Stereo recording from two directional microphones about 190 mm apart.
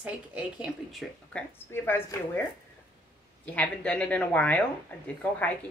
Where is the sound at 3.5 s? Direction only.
5° left (ahead or behind).